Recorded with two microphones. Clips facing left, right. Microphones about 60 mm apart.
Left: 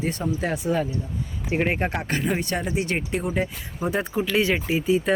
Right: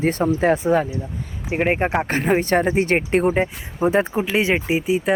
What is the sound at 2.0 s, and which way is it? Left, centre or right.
Speech, right.